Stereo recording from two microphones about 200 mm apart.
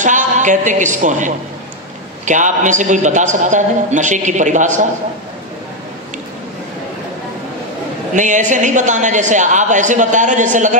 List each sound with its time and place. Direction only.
0.0 s a man's voice: 40° right (ahead or behind)
8.1 s a woman's voice: 40° right (ahead or behind)